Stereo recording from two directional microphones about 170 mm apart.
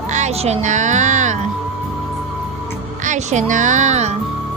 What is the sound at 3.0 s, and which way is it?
Music, 45° right (ahead or behind).